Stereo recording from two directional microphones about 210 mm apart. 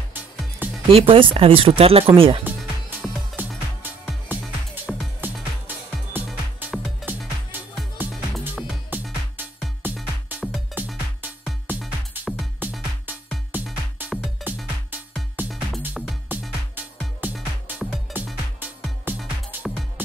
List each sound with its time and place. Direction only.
0.6 s music: 10° right (ahead or behind)
0.9 s speech: 25° right (ahead or behind)
3.4 s music: 10° right (ahead or behind)